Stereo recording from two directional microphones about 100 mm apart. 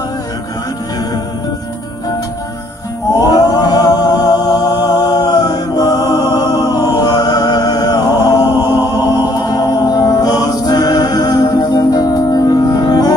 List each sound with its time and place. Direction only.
3.2 s music: 40° left (ahead or behind)